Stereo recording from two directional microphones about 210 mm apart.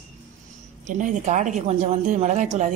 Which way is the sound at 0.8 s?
35° right (ahead or behind).